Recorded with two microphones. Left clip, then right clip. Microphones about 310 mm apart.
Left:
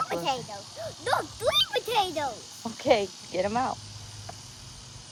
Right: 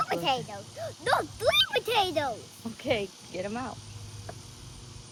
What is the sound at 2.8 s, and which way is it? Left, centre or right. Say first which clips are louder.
Speech: left 6 dB; centre.